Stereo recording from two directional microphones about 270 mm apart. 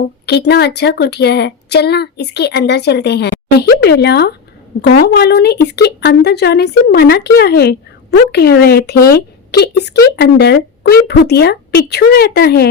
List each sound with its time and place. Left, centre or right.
0.0 s speech: left